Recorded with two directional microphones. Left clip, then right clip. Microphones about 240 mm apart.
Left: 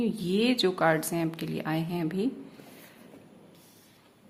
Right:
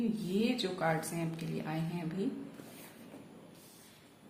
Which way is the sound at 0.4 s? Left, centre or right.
Left.